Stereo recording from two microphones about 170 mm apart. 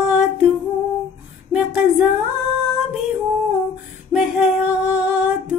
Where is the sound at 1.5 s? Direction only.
5° right (ahead or behind).